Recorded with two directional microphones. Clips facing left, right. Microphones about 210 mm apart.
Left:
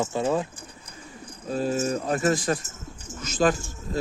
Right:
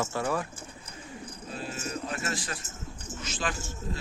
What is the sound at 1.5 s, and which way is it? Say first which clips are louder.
Speech: left 12 dB; 45° left (ahead or behind).